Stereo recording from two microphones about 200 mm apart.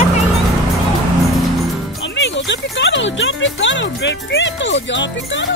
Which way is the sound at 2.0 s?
65° left (ahead or behind).